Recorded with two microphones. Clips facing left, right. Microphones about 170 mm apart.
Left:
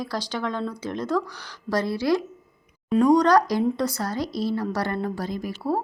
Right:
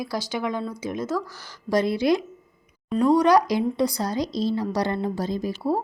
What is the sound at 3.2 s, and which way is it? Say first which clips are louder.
A woman's voice: even; 10° right (ahead or behind).